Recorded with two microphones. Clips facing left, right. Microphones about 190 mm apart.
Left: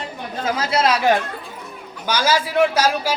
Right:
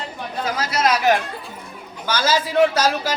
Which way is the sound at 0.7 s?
30° left (ahead or behind).